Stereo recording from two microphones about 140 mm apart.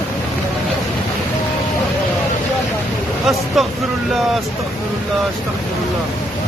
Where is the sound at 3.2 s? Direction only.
Centre (ahead or behind).